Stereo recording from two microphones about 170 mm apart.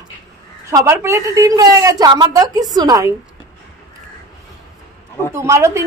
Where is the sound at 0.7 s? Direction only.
15° right (ahead or behind).